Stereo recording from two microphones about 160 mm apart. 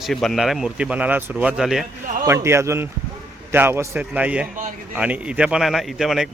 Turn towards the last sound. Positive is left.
turn(degrees=0)  # may be behind; listen again after turning